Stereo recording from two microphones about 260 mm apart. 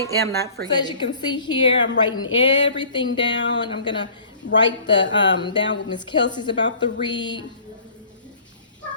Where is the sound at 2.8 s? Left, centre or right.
Centre.